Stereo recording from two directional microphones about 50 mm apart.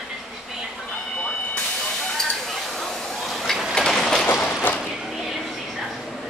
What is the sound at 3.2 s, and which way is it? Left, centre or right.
Printer, centre.